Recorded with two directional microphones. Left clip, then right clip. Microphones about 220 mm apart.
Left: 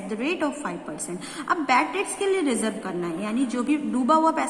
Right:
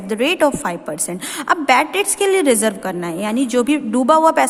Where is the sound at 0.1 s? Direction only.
45° right (ahead or behind).